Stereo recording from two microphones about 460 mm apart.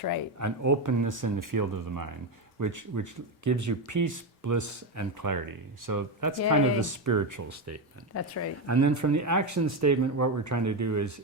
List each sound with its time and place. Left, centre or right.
0.3 s speech: right
8.1 s speech: left
8.6 s speech: right